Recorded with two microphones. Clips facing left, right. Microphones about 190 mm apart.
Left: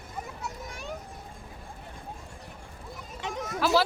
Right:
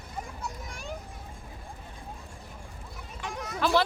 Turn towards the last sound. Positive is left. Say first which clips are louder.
# left 1 dB
turn(degrees=0)  # may be behind; listen again after turning